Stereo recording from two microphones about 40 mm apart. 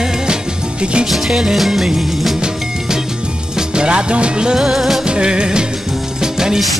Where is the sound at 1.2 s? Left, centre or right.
Centre.